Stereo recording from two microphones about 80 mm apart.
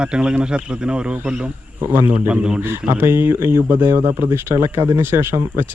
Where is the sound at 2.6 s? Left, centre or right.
Right.